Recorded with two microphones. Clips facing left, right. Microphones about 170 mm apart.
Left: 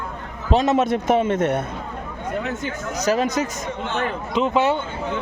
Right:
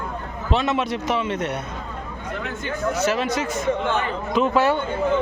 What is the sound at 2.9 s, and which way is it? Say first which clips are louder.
Speech: left 5 dB; 40° left (ahead or behind).